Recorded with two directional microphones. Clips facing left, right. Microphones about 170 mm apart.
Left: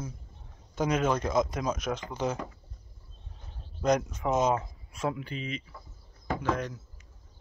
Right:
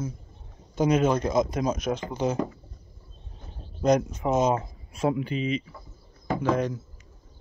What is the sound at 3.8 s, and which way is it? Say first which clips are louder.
Speech: right 4 dB; 25° right (ahead or behind).